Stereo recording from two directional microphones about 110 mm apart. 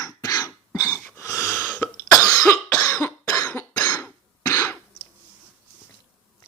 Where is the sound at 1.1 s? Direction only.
30° left (ahead or behind).